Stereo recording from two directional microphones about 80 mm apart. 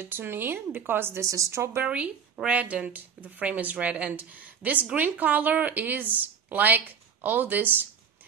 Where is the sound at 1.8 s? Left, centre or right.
Centre.